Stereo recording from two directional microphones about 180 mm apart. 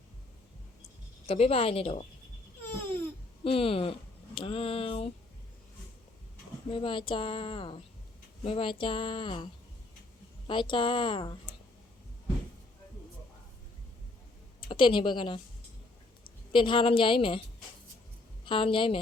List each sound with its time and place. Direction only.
1.3 s speech: 35° left (ahead or behind)
2.6 s babbling: 10° left (ahead or behind)
3.4 s speech: 30° left (ahead or behind)
6.7 s a woman's voice: 30° left (ahead or behind)
14.7 s a woman's voice: 30° left (ahead or behind)
16.5 s a woman's voice: 30° left (ahead or behind)
18.4 s a woman's voice: 30° left (ahead or behind)